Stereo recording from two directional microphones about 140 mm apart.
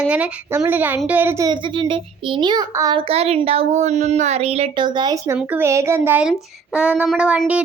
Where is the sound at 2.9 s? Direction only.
45° right (ahead or behind).